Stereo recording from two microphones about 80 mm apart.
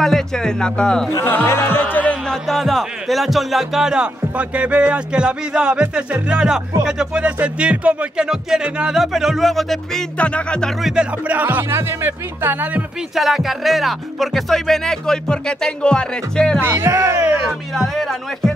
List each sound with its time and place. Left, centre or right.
0.0 s speech: centre
1.2 s music: left
2.2 s speech: centre
10.1 s speech: centre
10.8 s music: centre
11.2 s speech: right
13.1 s music: centre
16.6 s speech: right
17.7 s music: centre